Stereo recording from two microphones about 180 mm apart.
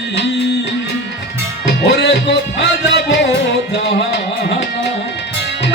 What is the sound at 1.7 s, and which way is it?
Music, 70° left (ahead or behind).